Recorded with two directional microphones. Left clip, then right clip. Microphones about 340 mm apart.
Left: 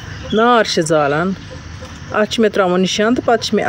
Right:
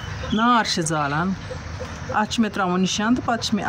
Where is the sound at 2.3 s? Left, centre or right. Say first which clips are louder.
Left 9 dB; centre.